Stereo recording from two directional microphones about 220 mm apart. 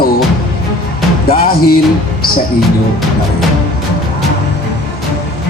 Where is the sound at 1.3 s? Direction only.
40° left (ahead or behind).